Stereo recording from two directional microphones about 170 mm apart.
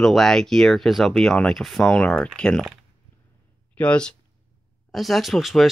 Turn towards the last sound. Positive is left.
turn(degrees=0)  # may be behind; listen again after turning